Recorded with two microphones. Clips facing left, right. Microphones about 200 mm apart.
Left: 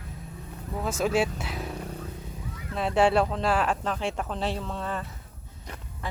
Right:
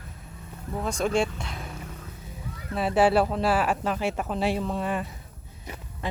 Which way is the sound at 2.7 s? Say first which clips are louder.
Right 1 dB; 5° right (ahead or behind).